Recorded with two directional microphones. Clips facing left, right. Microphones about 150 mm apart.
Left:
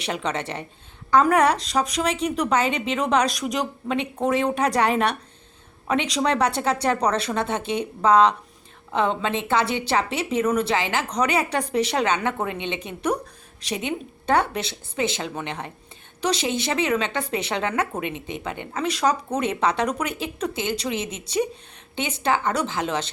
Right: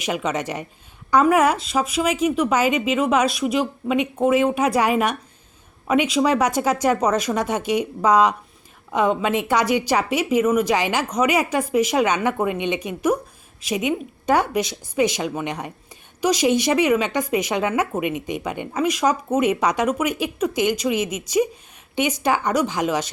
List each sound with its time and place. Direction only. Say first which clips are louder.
0.0 s speech: right 3 dB; 10° right (ahead or behind)